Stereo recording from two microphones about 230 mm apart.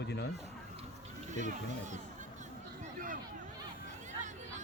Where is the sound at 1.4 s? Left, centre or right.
Right.